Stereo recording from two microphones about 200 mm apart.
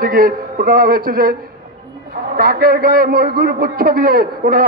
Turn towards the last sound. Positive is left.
turn(degrees=-45)  # may be behind; listen again after turning